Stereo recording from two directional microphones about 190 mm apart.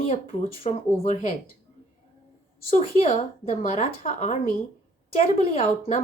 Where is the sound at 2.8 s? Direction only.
30° left (ahead or behind).